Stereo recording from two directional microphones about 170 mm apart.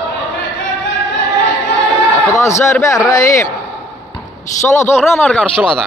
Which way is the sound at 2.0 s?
Centre (ahead or behind).